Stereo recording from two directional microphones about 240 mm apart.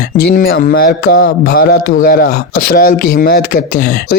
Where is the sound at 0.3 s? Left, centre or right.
Left.